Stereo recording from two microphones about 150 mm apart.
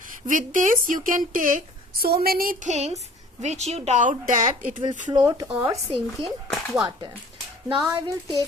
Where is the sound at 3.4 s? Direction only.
50° right (ahead or behind); by 4.7 s 65° right (ahead or behind).